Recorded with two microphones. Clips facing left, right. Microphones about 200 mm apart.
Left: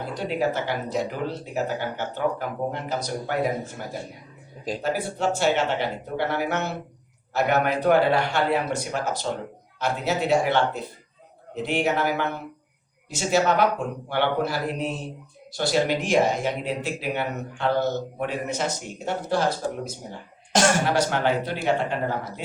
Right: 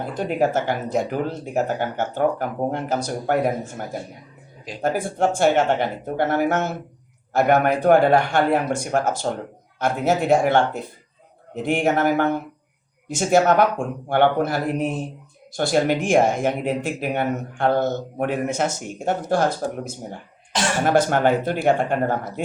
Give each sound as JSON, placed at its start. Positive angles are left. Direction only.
{"t": 0.0, "sound": "speech", "side_deg": -50}
{"t": 4.8, "sound": "speech", "side_deg": -50}
{"t": 20.5, "sound": "cough", "side_deg": 45}
{"t": 20.8, "sound": "speech", "side_deg": -50}